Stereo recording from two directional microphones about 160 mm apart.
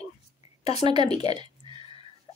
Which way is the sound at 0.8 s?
30° right (ahead or behind).